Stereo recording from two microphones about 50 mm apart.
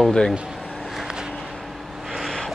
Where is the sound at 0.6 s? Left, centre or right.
Centre.